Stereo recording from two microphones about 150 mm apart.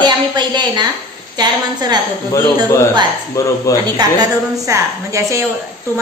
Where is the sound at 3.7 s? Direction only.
20° left (ahead or behind).